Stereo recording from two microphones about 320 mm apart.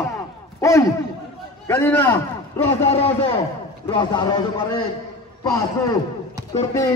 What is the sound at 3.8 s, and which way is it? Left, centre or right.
Speech, centre.